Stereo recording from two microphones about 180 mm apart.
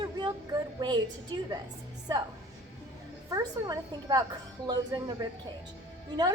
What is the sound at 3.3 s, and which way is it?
Speech, 20° right (ahead or behind).